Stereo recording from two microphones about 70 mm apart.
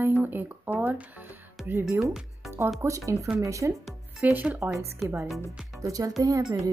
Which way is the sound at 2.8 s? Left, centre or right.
Right.